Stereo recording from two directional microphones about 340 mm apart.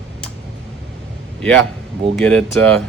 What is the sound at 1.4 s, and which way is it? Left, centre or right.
Speech, centre.